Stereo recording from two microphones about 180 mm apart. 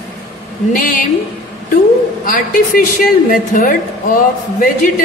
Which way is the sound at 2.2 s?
50° left (ahead or behind).